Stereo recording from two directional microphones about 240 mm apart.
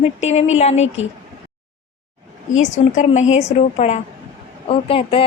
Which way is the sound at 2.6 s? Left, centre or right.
Left.